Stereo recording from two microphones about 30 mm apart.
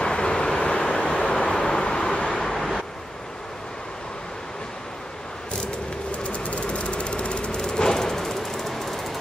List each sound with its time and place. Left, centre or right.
0.0 s vehicle: left
1.5 s vehicle: left
2.0 s vehicle: left
2.4 s vehicle: centre
6.2 s engine: left
7.6 s a sound: left